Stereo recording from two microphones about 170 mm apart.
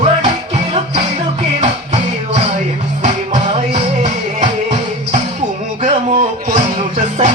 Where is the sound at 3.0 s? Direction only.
45° right (ahead or behind).